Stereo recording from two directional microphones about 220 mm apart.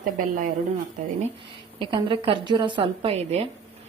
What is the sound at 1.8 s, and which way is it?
A woman's voice, 20° right (ahead or behind).